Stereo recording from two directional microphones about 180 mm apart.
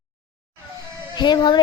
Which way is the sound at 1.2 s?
25° left (ahead or behind).